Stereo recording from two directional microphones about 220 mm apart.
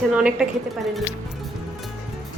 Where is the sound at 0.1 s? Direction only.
5° right (ahead or behind).